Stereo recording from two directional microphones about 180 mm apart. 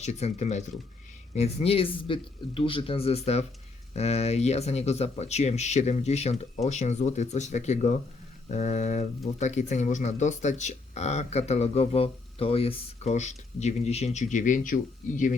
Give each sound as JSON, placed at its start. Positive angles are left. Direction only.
{"t": 0.0, "sound": "speech", "side_deg": 40}